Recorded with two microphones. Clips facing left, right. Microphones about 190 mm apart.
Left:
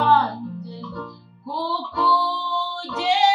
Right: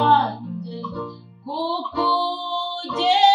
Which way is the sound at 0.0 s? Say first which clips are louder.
Right 1 dB; 25° right (ahead or behind).